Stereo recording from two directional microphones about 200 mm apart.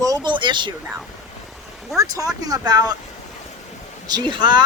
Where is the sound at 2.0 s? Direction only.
15° right (ahead or behind).